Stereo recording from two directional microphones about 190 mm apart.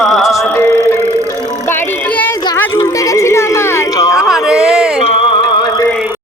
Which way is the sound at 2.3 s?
20° left (ahead or behind).